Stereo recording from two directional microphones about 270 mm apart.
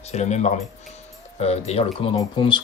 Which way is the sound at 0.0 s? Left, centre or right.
Left.